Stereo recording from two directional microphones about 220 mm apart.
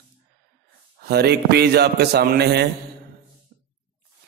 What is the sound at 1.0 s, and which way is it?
A man's voice, 45° right (ahead or behind).